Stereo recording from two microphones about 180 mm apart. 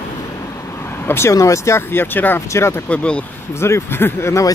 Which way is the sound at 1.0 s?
15° left (ahead or behind).